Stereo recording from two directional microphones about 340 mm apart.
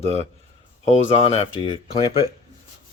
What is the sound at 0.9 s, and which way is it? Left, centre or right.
Speech, centre.